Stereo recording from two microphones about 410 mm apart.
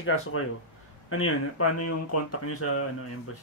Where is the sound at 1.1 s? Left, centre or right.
Left.